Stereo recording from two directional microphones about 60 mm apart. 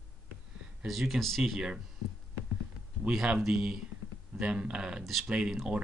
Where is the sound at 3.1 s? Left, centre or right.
Centre.